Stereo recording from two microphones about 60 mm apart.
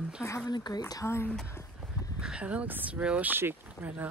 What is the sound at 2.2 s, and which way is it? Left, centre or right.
Speech, centre.